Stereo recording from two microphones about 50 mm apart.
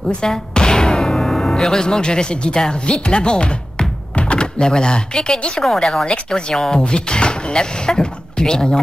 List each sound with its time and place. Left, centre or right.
0.1 s speech: centre
6.0 s speech: centre